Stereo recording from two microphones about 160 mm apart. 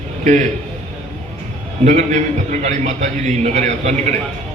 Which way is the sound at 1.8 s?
45° right (ahead or behind).